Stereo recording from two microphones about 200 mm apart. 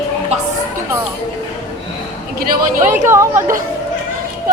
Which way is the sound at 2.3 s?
50° right (ahead or behind).